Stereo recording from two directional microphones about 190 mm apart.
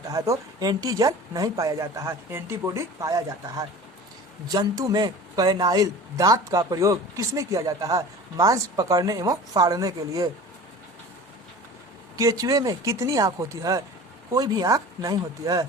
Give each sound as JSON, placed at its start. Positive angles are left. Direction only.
{"t": 0.1, "sound": "speech", "side_deg": -20}
{"t": 12.1, "sound": "speech", "side_deg": -15}